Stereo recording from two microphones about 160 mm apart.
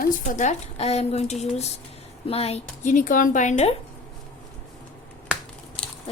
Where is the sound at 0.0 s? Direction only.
55° left (ahead or behind).